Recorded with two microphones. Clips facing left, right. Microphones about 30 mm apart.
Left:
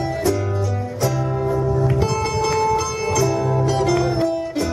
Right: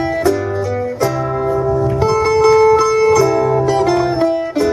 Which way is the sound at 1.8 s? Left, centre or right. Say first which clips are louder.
Right 6 dB; right.